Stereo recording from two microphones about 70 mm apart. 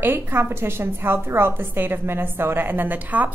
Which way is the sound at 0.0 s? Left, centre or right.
Right.